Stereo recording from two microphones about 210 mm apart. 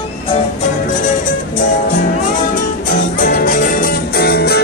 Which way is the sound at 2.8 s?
40° left (ahead or behind).